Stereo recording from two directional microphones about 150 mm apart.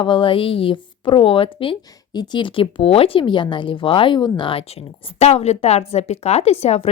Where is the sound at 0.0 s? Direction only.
35° left (ahead or behind).